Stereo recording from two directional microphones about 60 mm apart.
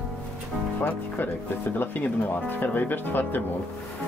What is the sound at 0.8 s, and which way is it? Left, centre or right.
Speech, left.